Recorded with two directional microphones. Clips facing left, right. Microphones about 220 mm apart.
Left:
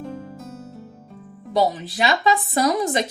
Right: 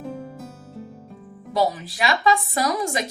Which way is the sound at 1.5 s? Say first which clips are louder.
Left 2 dB; 25° left (ahead or behind).